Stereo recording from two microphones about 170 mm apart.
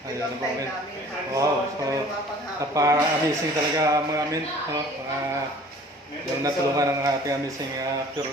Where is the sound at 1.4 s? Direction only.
20° right (ahead or behind).